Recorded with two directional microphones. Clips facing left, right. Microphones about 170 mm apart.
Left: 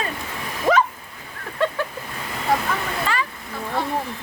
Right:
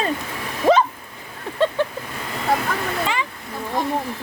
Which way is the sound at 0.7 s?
25° right (ahead or behind).